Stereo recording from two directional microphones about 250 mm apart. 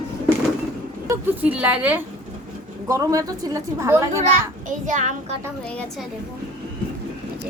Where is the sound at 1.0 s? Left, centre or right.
Centre.